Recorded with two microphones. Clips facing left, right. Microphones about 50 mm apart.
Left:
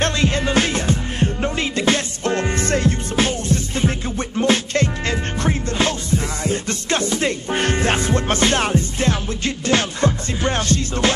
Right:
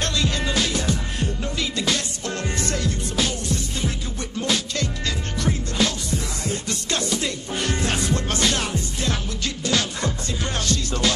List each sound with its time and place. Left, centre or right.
0.0 s music: left